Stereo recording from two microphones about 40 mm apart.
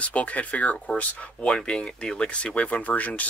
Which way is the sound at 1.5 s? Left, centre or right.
Left.